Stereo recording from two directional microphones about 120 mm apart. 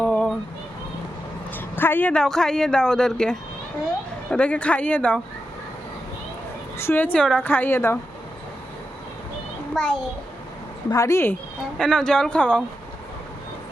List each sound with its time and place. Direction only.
0.0 s a sound: 5° left (ahead or behind)
1.5 s a sound: 15° left (ahead or behind)
2.2 s a woman's voice: 5° left (ahead or behind)
6.7 s a woman's voice: 20° left (ahead or behind)
9.7 s speech: 5° left (ahead or behind)
10.8 s speech: 25° left (ahead or behind)
11.8 s a woman's voice: 5° left (ahead or behind)